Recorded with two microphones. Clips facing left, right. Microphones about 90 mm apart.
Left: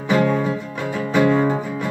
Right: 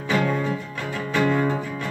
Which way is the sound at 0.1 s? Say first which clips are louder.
Left 5 dB; 25° left (ahead or behind).